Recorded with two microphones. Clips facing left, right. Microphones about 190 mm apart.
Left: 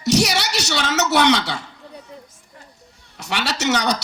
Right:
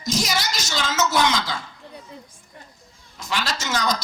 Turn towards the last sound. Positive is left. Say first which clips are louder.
# left 4 dB
turn(degrees=70)  # may be behind; listen again after turning